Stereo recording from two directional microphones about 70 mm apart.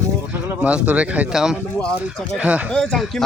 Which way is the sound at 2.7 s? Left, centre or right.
Centre.